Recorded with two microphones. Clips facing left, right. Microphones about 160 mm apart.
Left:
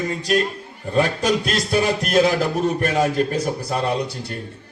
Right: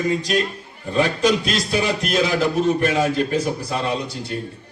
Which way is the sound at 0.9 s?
45° left (ahead or behind).